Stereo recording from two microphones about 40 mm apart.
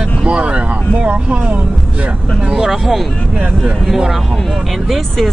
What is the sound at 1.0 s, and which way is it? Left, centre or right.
Speech, right.